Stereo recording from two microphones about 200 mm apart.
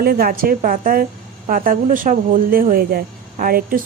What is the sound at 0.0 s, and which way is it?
Speech, 50° right (ahead or behind).